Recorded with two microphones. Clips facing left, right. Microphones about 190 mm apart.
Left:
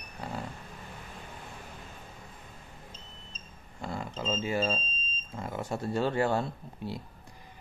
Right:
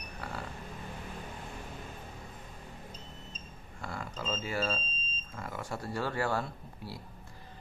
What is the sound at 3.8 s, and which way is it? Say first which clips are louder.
Speech: left 4 dB; 20° left (ahead or behind).